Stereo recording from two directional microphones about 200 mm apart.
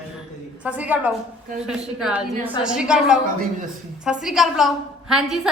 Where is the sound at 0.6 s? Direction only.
5° right (ahead or behind).